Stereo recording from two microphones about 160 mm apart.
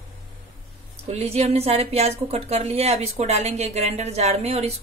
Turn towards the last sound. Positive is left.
turn(degrees=-40)  # may be behind; listen again after turning